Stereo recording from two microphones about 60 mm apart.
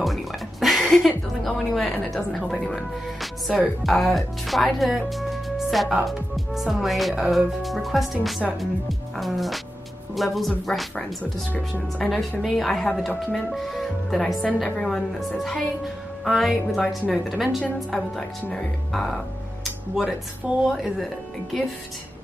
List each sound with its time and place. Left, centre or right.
0.0 s speech: centre
5.1 s music: centre
6.0 s speech: centre
18.9 s music: centre
20.0 s speech: centre
20.7 s speech: centre